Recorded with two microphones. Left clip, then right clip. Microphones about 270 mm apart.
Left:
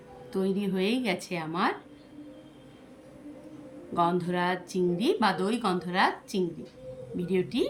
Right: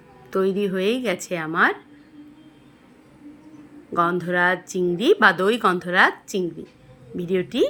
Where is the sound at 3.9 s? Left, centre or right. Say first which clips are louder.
Right 6 dB; centre.